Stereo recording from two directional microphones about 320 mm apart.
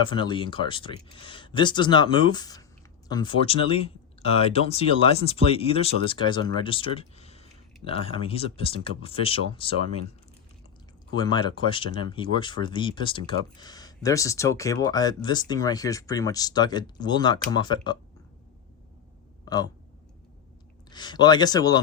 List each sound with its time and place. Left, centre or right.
0.0 s speech: centre
11.1 s speech: centre
19.5 s speech: centre
20.9 s speech: centre